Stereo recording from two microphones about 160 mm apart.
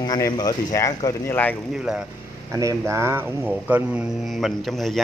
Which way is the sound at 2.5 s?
20° right (ahead or behind).